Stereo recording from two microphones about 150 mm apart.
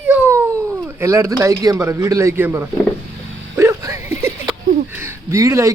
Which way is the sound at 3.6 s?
20° right (ahead or behind).